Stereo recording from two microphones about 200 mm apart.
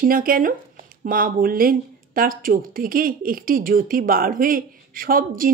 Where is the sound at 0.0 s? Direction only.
45° right (ahead or behind).